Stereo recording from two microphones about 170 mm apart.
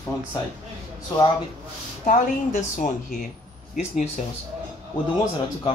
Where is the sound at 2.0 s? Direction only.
50° left (ahead or behind).